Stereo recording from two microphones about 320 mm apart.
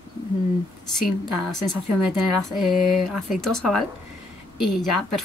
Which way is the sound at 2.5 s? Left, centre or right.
Centre.